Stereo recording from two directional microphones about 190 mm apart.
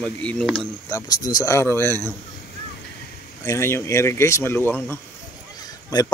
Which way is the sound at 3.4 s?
15° left (ahead or behind).